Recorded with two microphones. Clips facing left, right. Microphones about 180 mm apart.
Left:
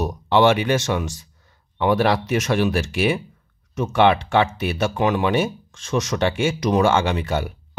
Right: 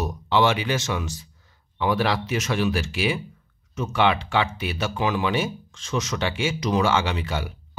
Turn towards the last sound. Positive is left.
turn(degrees=50)  # may be behind; listen again after turning